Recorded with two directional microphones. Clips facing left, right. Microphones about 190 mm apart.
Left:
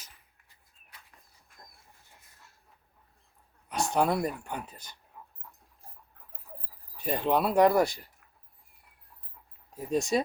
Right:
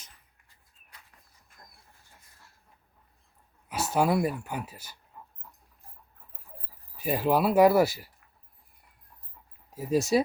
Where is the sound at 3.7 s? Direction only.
5° right (ahead or behind).